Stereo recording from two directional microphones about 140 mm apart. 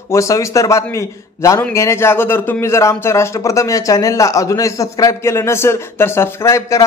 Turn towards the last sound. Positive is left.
turn(degrees=20)  # may be behind; listen again after turning